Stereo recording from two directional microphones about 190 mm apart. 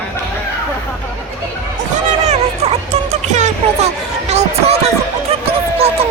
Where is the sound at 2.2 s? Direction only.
35° right (ahead or behind).